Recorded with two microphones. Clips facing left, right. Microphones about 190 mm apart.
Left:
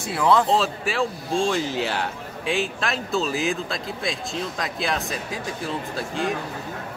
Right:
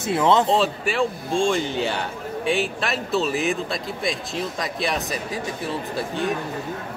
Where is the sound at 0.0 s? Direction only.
20° right (ahead or behind).